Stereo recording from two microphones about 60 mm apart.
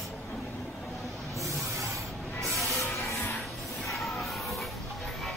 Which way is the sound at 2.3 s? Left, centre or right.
Centre.